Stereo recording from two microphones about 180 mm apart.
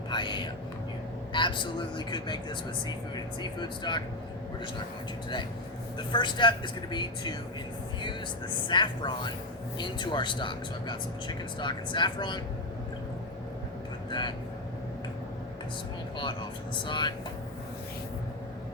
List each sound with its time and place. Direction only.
0.1 s whispering: 25° left (ahead or behind)
1.3 s speech: 25° left (ahead or behind)
6.1 s speech: 25° left (ahead or behind)
8.6 s speech: 25° left (ahead or behind)
14.1 s speech: 25° left (ahead or behind)
16.8 s speech: 25° left (ahead or behind)